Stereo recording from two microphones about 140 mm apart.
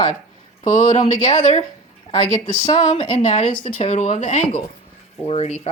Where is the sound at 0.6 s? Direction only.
60° left (ahead or behind).